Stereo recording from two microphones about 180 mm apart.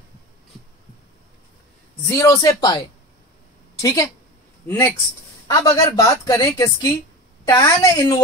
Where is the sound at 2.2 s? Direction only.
20° left (ahead or behind).